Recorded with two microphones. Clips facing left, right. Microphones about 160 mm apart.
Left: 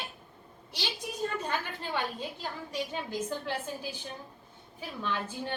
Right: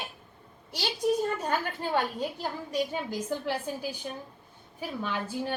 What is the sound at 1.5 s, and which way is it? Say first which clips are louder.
A woman's voice: right 5 dB; 45° right (ahead or behind).